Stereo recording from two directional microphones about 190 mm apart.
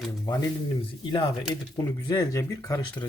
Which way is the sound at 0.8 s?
30° left (ahead or behind).